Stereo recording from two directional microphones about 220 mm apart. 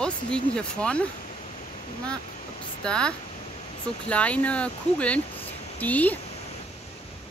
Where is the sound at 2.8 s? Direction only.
5° left (ahead or behind).